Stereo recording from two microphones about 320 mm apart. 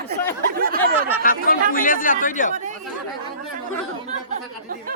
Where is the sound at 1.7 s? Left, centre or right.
Left.